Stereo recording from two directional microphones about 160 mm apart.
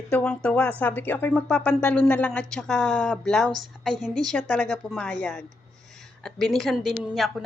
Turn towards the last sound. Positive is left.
turn(degrees=0)  # may be behind; listen again after turning